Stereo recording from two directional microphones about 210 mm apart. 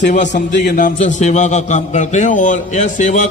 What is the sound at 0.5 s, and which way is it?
A man's voice, 50° left (ahead or behind).